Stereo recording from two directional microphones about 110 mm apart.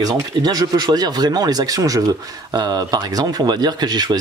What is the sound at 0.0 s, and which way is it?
A man's voice, 35° right (ahead or behind).